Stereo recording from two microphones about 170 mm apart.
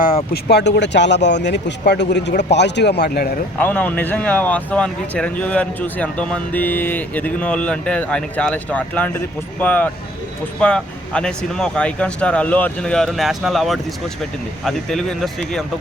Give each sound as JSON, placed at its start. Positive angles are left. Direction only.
{"t": 0.4, "sound": "a man's voice", "side_deg": 80}
{"t": 3.6, "sound": "speech", "side_deg": 10}